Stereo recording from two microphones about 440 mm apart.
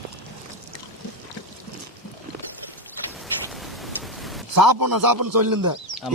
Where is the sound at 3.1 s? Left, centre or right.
Centre.